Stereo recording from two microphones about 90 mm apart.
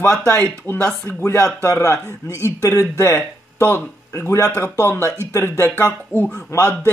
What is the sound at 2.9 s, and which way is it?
Speech, 30° left (ahead or behind).